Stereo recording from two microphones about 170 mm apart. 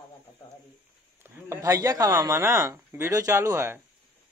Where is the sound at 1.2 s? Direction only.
15° right (ahead or behind).